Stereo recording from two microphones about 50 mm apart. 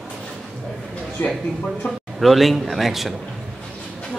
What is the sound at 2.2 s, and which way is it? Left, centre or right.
Speech, centre.